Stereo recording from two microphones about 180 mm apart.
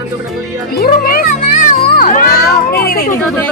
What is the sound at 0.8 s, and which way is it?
Speech, 55° left (ahead or behind).